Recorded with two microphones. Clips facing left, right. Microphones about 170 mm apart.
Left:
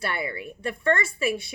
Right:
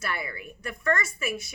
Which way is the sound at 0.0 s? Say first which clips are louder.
Left 4 dB; 30° left (ahead or behind).